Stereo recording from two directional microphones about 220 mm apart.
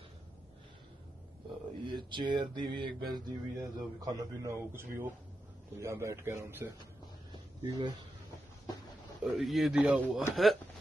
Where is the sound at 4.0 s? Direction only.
15° right (ahead or behind).